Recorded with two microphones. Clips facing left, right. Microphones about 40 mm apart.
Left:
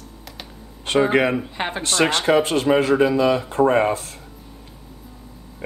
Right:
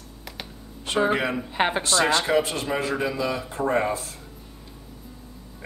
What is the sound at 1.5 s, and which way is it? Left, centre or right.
Speech, centre.